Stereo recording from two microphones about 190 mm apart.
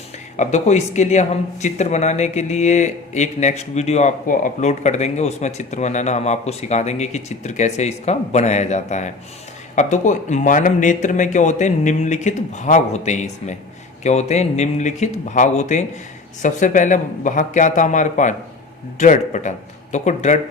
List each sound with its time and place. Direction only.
0.3 s speech: 35° left (ahead or behind)